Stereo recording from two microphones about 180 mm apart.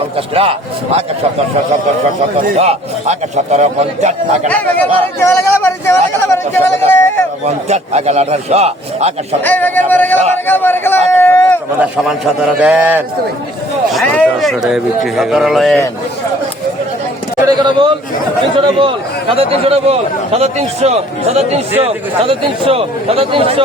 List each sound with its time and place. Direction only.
2.6 s a man's voice: 35° right (ahead or behind)
4.4 s a sound: 10° left (ahead or behind)
7.4 s a man's voice: 35° right (ahead or behind)
9.4 s a man's voice: 10° left (ahead or behind)
11.1 s a sound: 10° left (ahead or behind)
11.8 s a man's voice: 5° right (ahead or behind)
17.4 s a man's voice: 25° right (ahead or behind)